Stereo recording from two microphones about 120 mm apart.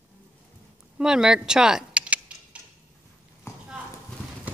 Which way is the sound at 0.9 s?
5° right (ahead or behind).